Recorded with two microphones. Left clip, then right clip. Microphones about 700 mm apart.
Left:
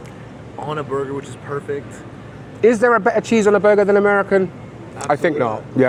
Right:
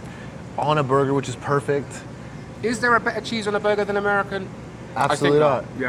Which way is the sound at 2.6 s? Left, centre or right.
Left.